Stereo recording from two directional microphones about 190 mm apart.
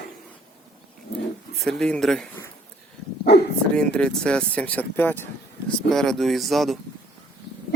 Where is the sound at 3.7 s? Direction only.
5° left (ahead or behind).